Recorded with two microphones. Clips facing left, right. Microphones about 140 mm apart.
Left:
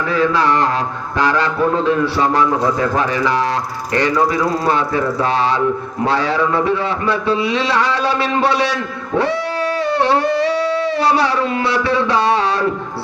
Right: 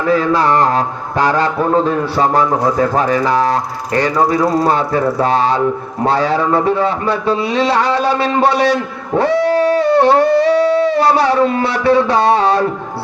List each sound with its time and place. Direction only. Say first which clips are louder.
0.1 s a man's voice: right 3 dB; 45° right (ahead or behind)